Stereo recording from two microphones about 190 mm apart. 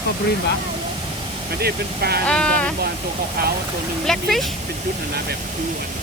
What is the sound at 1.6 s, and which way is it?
Speech, 55° right (ahead or behind).